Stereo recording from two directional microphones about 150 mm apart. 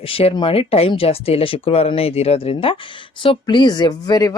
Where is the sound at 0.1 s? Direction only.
40° left (ahead or behind).